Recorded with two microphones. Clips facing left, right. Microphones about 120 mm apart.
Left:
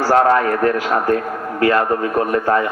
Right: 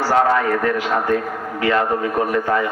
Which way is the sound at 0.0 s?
45° left (ahead or behind).